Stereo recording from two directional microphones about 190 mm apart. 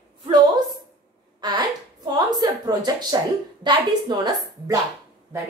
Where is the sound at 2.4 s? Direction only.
20° right (ahead or behind).